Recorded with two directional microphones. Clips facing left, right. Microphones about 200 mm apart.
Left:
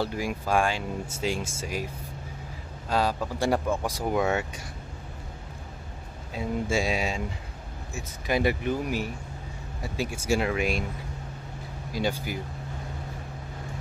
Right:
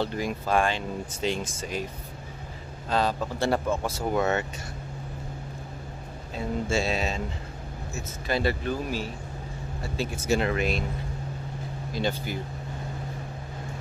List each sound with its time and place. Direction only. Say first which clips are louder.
0.0 s speech: right 1 dB; 10° left (ahead or behind)
2.9 s speech: even; 10° left (ahead or behind)
6.3 s speech: even; 10° left (ahead or behind)
11.9 s speech: even; 10° left (ahead or behind)